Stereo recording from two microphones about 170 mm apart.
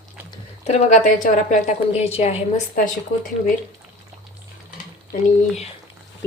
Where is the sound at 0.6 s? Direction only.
40° left (ahead or behind).